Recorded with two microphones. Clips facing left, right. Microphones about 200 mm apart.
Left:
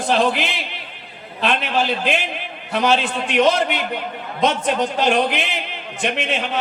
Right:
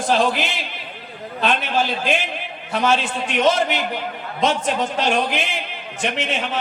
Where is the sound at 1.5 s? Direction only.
60° left (ahead or behind).